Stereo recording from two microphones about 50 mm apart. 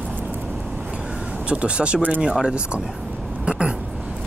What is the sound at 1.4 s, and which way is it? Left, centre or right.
Speech, right.